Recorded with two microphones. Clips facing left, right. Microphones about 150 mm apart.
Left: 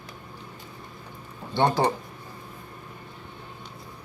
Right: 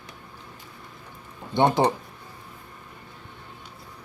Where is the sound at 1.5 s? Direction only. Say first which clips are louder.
Right 2 dB; 15° right (ahead or behind).